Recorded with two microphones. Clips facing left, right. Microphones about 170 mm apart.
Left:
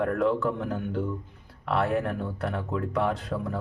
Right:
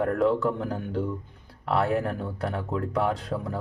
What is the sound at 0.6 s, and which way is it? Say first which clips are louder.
Speech: even; 35° right (ahead or behind).